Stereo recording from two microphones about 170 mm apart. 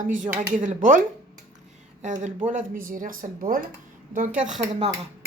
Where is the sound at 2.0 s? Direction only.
45° right (ahead or behind).